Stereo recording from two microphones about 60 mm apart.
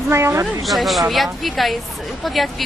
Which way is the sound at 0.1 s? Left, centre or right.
Right.